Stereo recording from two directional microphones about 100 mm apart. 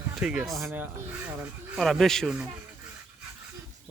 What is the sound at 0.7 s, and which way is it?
Speech, 20° right (ahead or behind).